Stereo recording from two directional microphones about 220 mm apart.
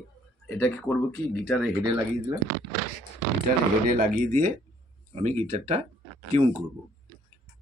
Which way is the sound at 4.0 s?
40° right (ahead or behind).